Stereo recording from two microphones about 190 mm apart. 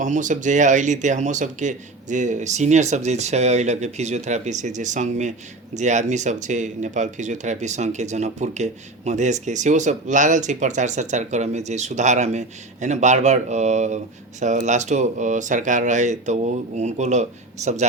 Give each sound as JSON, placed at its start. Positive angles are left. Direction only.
{"t": 0.0, "sound": "speech", "side_deg": -40}